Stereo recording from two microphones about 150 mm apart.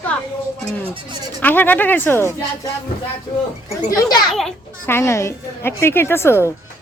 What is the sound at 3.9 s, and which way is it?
Speech, 25° left (ahead or behind).